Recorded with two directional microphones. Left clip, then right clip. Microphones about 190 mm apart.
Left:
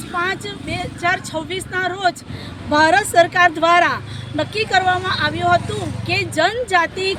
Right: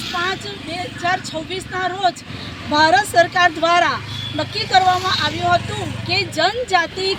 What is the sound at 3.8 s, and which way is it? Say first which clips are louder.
Speech: even; 35° left (ahead or behind).